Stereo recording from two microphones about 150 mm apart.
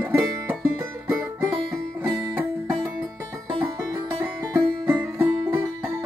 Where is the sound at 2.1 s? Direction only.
10° right (ahead or behind).